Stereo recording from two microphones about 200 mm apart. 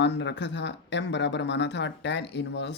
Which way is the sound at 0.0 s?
60° left (ahead or behind).